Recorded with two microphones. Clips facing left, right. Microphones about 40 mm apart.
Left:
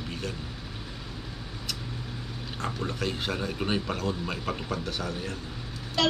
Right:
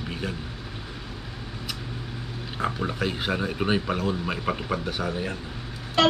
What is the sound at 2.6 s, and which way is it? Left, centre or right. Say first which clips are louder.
A woman's voice: right 5 dB; centre.